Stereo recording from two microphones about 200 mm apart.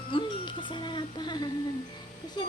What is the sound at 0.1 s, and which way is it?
Music, 25° left (ahead or behind).